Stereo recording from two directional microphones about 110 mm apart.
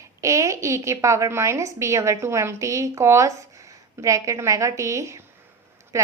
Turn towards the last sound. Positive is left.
turn(degrees=-25)  # may be behind; listen again after turning